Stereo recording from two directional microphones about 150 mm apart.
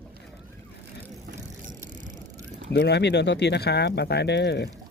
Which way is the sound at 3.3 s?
90° left.